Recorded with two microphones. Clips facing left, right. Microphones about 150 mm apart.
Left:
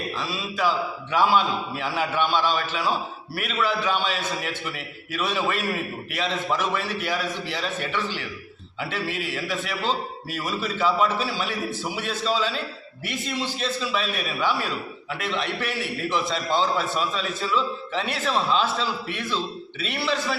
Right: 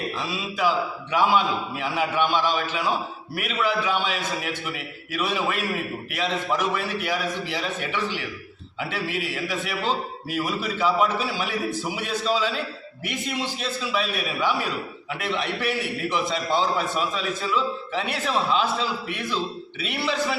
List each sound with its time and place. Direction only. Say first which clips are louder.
0.2 s a man's voice: even; 15° right (ahead or behind)